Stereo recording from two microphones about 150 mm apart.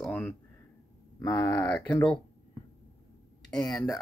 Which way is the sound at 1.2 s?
20° left (ahead or behind).